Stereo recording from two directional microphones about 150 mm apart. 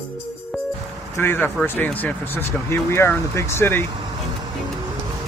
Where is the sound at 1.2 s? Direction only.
15° left (ahead or behind).